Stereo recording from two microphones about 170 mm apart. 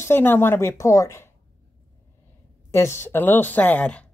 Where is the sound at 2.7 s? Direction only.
15° left (ahead or behind).